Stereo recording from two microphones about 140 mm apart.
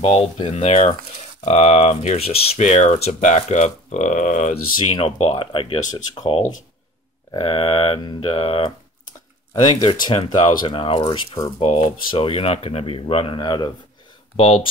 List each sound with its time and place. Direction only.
0.0 s speech: 45° left (ahead or behind); by 4.6 s 65° left (ahead or behind)
4.9 s speech: 45° left (ahead or behind)
11.6 s speech: 45° left (ahead or behind)
14.3 s speech: 40° left (ahead or behind)